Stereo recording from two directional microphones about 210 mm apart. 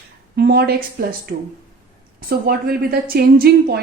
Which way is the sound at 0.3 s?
50° right (ahead or behind).